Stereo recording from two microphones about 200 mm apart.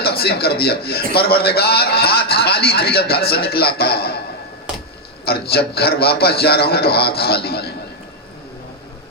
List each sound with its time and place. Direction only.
0.0 s a man's voice: 50° left (ahead or behind)
5.2 s a man's voice: 50° left (ahead or behind)